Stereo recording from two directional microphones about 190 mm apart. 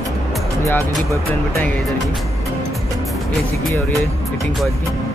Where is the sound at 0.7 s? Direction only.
15° left (ahead or behind).